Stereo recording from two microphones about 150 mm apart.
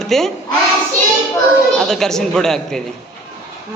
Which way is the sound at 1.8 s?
5° left (ahead or behind).